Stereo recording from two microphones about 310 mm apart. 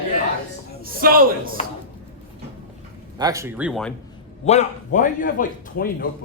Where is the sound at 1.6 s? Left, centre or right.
Centre.